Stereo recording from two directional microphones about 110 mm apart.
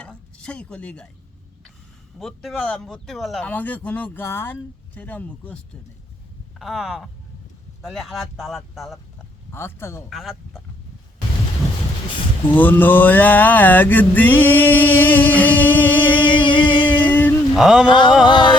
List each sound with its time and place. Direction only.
0.0 s a sound: 10° left (ahead or behind)
2.1 s speech: centre (ahead or behind)
3.4 s mantra: 15° left (ahead or behind)
6.6 s speech: centre (ahead or behind)
9.5 s speech: 20° left (ahead or behind)
10.1 s speech: centre (ahead or behind)
12.5 s mantra: 15° left (ahead or behind)
15.9 s music: 45° left (ahead or behind)
17.1 s a sound: 15° left (ahead or behind)
17.5 s speech: 5° right (ahead or behind)
17.8 s a sound: 45° left (ahead or behind)